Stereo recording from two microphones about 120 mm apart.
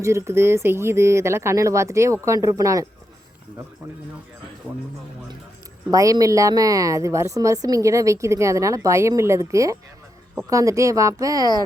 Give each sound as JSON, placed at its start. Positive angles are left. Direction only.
{"t": 0.0, "sound": "a woman's voice", "side_deg": -25}
{"t": 4.7, "sound": "speech", "side_deg": -15}
{"t": 5.9, "sound": "a woman's voice", "side_deg": -30}